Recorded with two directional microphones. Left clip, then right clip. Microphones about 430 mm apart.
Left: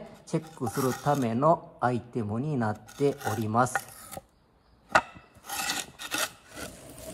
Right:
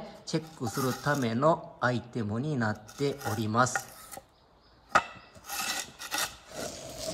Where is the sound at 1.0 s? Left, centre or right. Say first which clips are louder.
Left 2 dB; centre.